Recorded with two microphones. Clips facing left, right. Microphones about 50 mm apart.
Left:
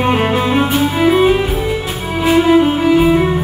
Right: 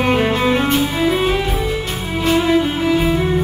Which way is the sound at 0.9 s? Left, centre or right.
Left.